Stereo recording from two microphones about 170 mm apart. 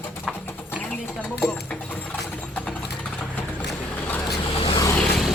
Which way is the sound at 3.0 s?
5° left (ahead or behind).